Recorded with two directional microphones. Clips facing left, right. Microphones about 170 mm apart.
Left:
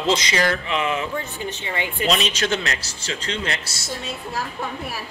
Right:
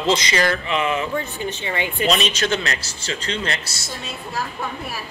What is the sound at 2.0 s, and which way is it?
Speech, 80° right.